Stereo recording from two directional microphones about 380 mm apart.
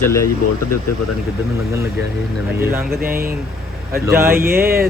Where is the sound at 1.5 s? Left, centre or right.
Centre.